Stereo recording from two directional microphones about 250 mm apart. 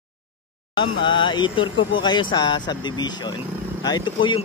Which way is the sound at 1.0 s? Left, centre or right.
Centre.